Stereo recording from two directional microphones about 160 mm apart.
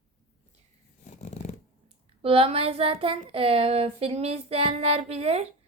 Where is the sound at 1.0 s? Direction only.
45° left (ahead or behind).